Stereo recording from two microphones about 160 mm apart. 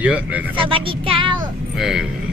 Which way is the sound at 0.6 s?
35° right (ahead or behind).